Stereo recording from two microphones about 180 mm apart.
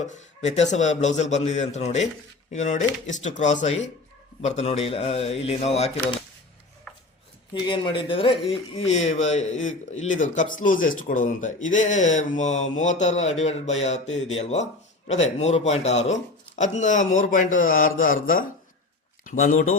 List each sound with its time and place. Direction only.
0.1 s a man's voice: 40° left (ahead or behind)
7.7 s a man's voice: 25° left (ahead or behind); by 19.7 s 45° left (ahead or behind)